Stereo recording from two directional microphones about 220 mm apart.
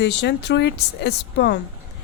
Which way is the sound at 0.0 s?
50° left (ahead or behind).